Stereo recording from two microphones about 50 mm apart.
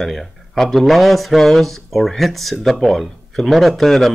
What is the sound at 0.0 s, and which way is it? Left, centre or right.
Speech, centre.